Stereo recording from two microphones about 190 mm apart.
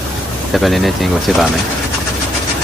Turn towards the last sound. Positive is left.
turn(degrees=0)  # may be behind; listen again after turning